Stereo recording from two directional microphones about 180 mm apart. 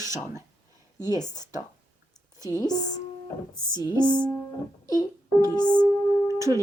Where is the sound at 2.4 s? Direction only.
20° left (ahead or behind).